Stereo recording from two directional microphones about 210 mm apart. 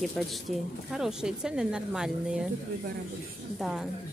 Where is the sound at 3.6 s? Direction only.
Centre (ahead or behind).